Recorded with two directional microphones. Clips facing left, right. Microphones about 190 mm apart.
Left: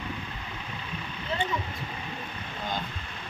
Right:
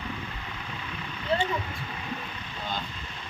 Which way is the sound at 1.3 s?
35° right (ahead or behind).